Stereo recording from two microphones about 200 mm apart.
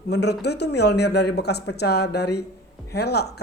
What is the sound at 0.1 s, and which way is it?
Speech, 55° left (ahead or behind).